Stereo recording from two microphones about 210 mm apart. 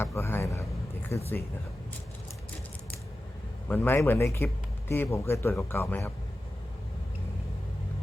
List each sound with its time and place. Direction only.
0.0 s vehicle: 10° left (ahead or behind)
3.7 s speech: 10° left (ahead or behind)